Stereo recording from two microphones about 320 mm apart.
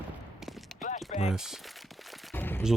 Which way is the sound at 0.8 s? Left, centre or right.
Left.